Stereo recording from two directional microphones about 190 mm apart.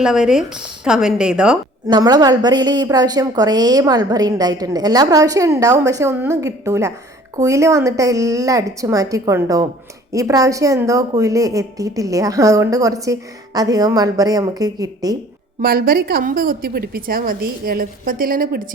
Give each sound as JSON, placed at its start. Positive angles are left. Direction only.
{"t": 0.0, "sound": "a woman's voice", "side_deg": -5}
{"t": 1.9, "sound": "a woman's voice", "side_deg": -20}
{"t": 15.6, "sound": "a woman's voice", "side_deg": -50}